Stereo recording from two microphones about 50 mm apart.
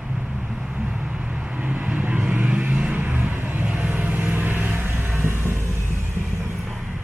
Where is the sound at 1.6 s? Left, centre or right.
Right.